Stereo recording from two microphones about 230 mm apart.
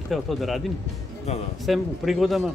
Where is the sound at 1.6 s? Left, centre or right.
Centre.